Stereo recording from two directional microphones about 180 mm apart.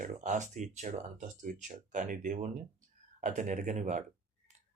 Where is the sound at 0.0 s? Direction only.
45° right (ahead or behind).